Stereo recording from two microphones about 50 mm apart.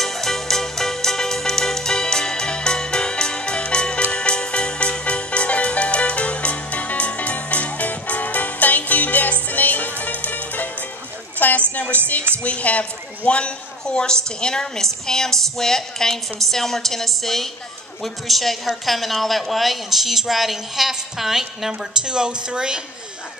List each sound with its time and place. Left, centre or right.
0.0 s music: centre; by 11.6 s left
12.4 s a woman's voice: left; by 22.8 s centre